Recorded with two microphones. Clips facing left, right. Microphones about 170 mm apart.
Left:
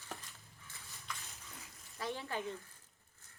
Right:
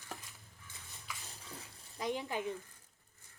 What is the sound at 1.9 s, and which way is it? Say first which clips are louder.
Stir: right 3 dB; 15° right (ahead or behind).